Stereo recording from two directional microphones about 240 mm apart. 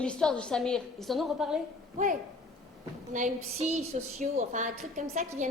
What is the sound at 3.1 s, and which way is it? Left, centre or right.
A woman's voice, right.